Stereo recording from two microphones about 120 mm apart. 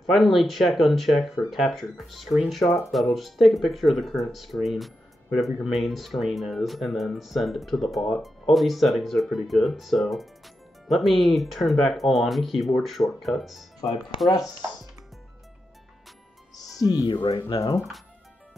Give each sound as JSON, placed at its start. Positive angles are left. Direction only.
{"t": 0.0, "sound": "speech", "side_deg": 0}
{"t": 16.8, "sound": "speech", "side_deg": 30}
{"t": 17.1, "sound": "speech", "side_deg": 50}
{"t": 17.5, "sound": "speech", "side_deg": 35}